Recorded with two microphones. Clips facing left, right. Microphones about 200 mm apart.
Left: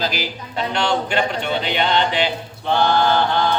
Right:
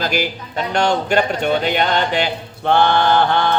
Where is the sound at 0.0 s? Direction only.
50° right (ahead or behind).